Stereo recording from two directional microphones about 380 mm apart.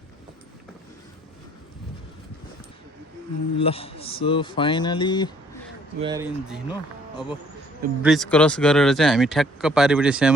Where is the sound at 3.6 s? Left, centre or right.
Centre.